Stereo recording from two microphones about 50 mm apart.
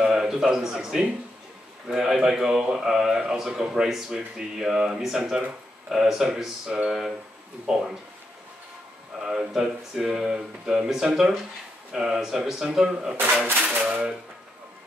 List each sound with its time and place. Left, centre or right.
0.0 s a man's voice: centre
9.2 s speech: centre
13.6 s speech: right